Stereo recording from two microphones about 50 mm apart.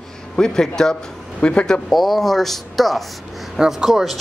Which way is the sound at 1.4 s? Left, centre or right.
Left.